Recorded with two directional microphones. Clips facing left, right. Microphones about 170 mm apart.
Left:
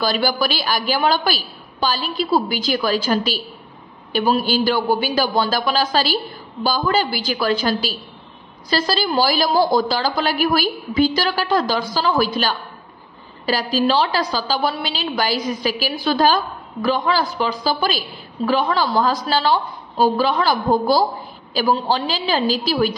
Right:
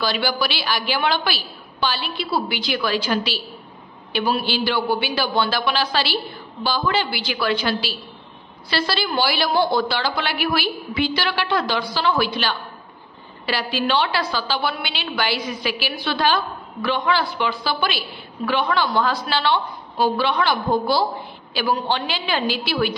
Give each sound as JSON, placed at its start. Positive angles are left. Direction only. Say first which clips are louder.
{"t": 0.0, "sound": "a woman's voice", "louder": "left 3 dB", "side_deg": 45}